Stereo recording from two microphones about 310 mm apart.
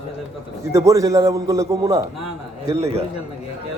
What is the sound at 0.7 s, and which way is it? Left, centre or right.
A man's voice, centre.